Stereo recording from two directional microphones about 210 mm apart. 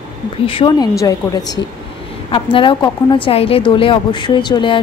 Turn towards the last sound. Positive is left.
turn(degrees=20)  # may be behind; listen again after turning